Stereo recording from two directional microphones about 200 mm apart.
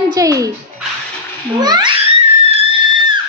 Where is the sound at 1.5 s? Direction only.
20° right (ahead or behind).